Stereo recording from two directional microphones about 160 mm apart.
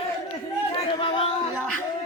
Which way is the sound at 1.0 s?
30° left (ahead or behind).